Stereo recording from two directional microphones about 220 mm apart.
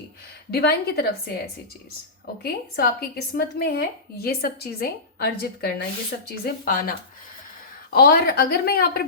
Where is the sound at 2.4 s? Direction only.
45° left (ahead or behind).